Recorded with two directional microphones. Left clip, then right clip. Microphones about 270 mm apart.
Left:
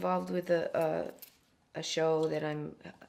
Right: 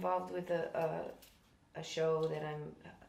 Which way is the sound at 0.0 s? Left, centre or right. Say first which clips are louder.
Left 4 dB; left.